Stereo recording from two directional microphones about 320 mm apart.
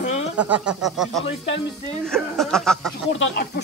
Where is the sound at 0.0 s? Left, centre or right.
Left.